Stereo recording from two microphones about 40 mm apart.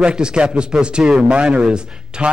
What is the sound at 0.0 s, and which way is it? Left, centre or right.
A man's voice, right.